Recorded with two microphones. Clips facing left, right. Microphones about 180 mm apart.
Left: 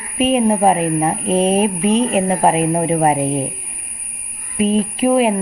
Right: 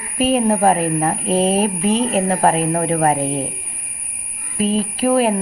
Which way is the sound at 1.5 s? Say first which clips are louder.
Left 2 dB; 30° right (ahead or behind).